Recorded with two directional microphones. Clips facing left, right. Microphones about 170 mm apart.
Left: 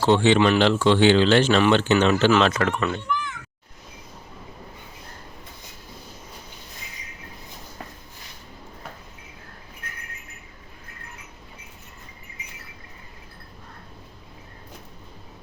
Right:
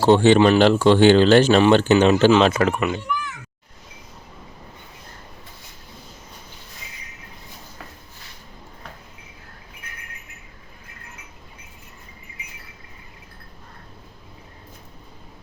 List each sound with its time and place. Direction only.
0.0 s speech: 40° right (ahead or behind)
2.4 s speech: 25° right (ahead or behind)